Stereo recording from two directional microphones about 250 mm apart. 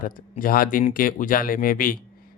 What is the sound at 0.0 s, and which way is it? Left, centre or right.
Speech, left.